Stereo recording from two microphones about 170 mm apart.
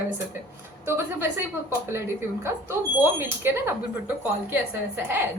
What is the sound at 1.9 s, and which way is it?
Speech, 15° right (ahead or behind).